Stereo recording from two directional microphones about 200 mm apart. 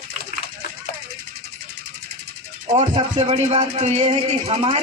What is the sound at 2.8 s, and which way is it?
Speech, 30° right (ahead or behind).